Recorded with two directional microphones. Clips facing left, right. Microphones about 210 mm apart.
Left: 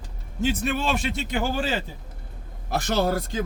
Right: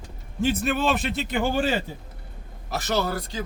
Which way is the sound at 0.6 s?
Centre (ahead or behind).